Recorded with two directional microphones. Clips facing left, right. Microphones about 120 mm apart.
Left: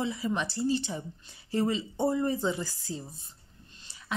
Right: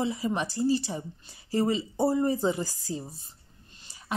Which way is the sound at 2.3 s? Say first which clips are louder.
Right 3 dB; 40° right (ahead or behind).